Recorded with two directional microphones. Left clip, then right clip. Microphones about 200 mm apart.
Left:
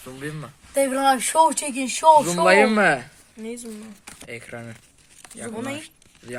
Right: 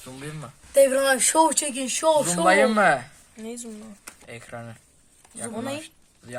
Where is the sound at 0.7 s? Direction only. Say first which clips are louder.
Right 1 dB; 50° right (ahead or behind).